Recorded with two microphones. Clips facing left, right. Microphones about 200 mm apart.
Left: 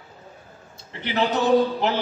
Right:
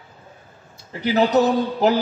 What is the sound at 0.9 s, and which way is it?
A man's voice, 40° right (ahead or behind).